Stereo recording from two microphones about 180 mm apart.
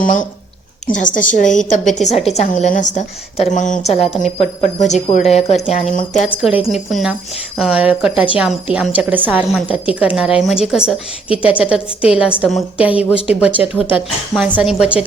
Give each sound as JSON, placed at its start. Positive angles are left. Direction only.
{"t": 0.0, "sound": "a woman's voice", "side_deg": 45}
{"t": 6.1, "sound": "a woman's voice", "side_deg": -5}